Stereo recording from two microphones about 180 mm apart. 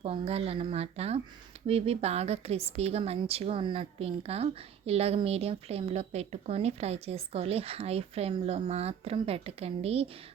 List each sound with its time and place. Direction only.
0.0 s speech: 35° right (ahead or behind)